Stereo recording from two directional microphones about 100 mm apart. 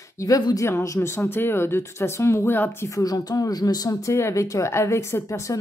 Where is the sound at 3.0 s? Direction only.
40° left (ahead or behind).